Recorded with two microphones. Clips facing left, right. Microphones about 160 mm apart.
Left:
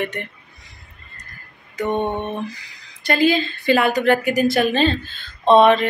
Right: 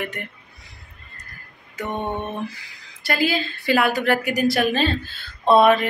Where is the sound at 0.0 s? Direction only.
Centre (ahead or behind).